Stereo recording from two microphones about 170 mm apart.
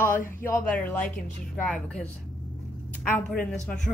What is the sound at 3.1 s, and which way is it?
Speech, 10° left (ahead or behind).